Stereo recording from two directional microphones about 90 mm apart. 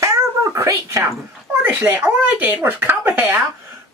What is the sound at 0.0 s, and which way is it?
Cat, 35° right (ahead or behind).